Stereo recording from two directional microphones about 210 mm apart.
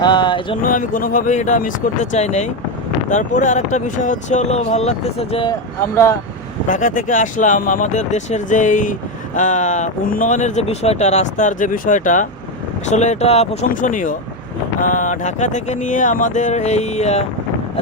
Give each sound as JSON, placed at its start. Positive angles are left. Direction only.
{"t": 0.0, "sound": "speech", "side_deg": 20}
{"t": 0.6, "sound": "speech", "side_deg": 40}
{"t": 6.7, "sound": "speech", "side_deg": 40}